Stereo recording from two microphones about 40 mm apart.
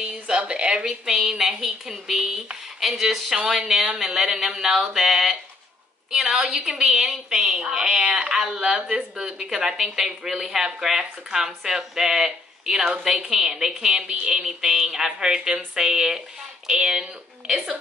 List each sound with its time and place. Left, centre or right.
0.0 s speech: right
1.6 s a woman's voice: centre